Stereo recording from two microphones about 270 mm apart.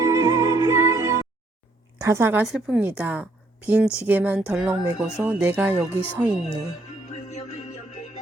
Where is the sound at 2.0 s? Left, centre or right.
Centre.